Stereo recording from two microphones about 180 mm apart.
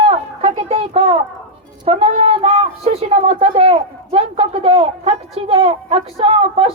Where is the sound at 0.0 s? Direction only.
35° right (ahead or behind).